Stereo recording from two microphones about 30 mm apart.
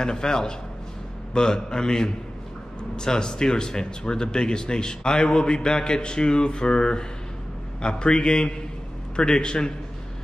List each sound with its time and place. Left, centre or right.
0.0 s speech: left